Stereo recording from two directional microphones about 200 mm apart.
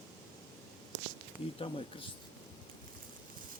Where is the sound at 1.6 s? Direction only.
25° left (ahead or behind).